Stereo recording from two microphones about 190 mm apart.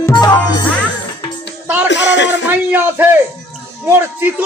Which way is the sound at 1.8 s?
65° left (ahead or behind).